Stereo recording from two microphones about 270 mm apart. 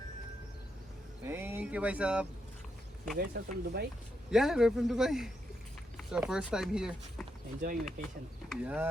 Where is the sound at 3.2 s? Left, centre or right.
Right.